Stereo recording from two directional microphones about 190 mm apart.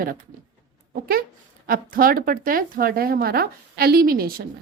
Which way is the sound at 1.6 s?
50° right (ahead or behind).